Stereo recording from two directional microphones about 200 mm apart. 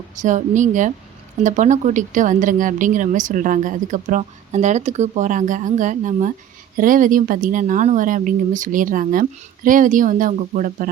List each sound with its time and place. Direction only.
0.2 s speech: 40° right (ahead or behind)